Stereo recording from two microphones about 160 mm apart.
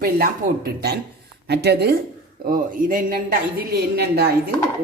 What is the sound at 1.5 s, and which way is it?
Speech, 90° right.